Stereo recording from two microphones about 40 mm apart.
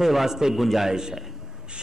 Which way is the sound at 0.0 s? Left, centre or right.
Centre.